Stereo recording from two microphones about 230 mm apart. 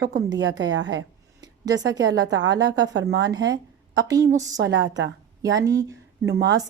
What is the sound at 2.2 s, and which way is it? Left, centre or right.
Speech, right.